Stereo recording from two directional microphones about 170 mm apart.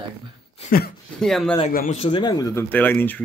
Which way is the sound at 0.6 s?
65° left (ahead or behind).